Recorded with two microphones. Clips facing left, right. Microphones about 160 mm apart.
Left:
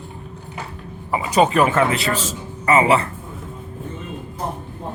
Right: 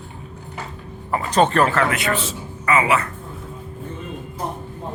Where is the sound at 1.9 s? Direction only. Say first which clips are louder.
Even; 35° left (ahead or behind).